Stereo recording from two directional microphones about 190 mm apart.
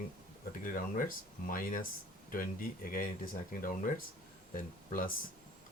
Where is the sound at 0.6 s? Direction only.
45° left (ahead or behind).